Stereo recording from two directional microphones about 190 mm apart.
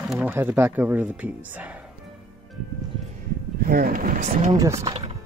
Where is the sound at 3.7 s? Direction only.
50° right (ahead or behind).